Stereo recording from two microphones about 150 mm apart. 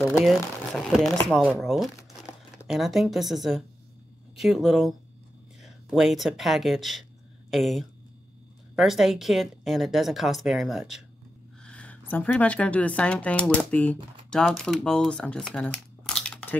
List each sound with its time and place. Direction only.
0.2 s a woman's voice: centre (ahead or behind)